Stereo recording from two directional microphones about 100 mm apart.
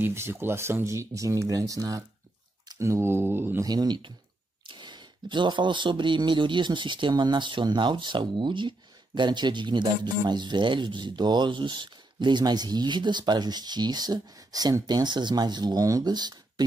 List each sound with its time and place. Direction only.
0.0 s speech: 25° right (ahead or behind)
3.6 s speech: 45° right (ahead or behind)